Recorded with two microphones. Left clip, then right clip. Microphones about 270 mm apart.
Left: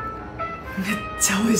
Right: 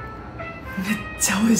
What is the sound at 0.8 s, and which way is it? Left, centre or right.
Speech, centre.